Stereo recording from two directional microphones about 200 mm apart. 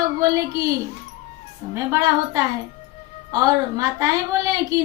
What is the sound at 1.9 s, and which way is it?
A woman's voice, 15° right (ahead or behind).